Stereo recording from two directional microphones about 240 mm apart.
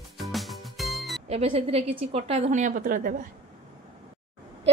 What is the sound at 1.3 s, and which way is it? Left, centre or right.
A woman's voice, right.